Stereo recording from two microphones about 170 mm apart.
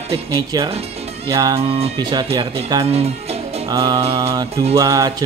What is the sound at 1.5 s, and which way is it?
Speech, 35° right (ahead or behind).